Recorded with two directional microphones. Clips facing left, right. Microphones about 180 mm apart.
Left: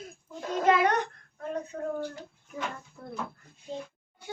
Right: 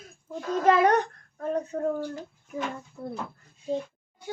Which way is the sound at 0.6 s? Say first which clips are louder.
Right 3 dB; 40° right (ahead or behind).